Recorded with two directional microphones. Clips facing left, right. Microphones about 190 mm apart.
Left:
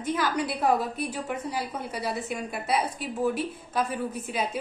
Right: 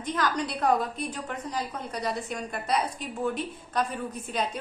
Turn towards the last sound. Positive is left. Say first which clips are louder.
# left 1 dB
turn(degrees=5)  # may be behind; listen again after turning